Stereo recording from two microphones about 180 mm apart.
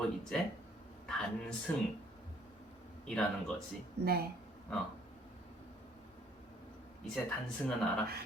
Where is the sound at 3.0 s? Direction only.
5° left (ahead or behind).